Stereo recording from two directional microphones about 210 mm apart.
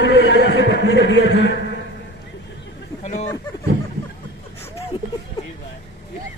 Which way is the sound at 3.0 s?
30° left (ahead or behind).